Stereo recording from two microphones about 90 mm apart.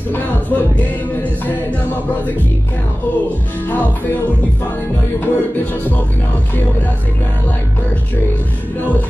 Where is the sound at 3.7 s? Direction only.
20° left (ahead or behind).